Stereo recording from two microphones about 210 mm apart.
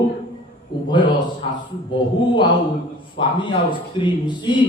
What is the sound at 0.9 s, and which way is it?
Speech, 20° left (ahead or behind).